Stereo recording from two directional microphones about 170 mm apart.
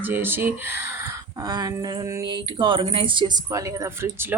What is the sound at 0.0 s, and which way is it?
Speech, 10° right (ahead or behind).